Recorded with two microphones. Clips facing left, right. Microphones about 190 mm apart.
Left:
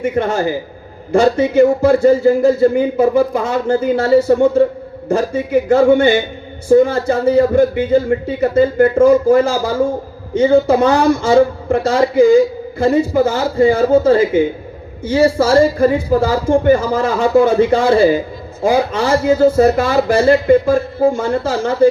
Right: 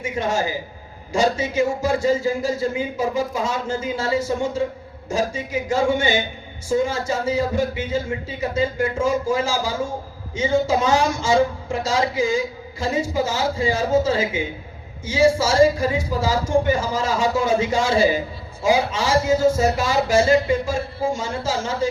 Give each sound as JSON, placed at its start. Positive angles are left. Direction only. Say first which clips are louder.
{"t": 0.0, "sound": "speech", "louder": "left 7 dB", "side_deg": 60}